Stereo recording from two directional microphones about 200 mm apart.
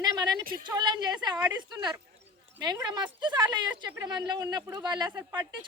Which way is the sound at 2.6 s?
20° right (ahead or behind).